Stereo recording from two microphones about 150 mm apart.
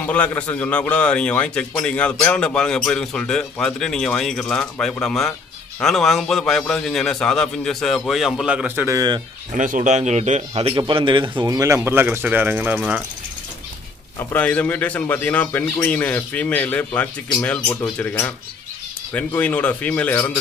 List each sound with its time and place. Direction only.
0.0 s a man's voice: 10° left (ahead or behind); by 9.2 s 25° right (ahead or behind)
9.6 s speech: 55° right (ahead or behind)
10.5 s speech: 35° right (ahead or behind)
11.4 s speech: 20° right (ahead or behind)
14.3 s a man's voice: 10° left (ahead or behind)